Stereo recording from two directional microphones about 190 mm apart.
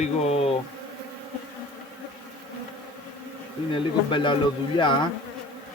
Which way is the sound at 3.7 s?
25° left (ahead or behind).